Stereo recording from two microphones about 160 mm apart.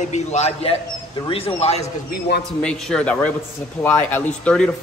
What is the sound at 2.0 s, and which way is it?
Speech, 90° left.